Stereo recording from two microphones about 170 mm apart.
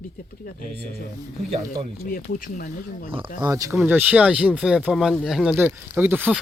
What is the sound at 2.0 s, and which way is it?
Speech, 55° left (ahead or behind).